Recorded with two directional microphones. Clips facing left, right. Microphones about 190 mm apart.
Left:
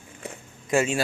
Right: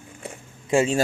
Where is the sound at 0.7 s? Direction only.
30° right (ahead or behind).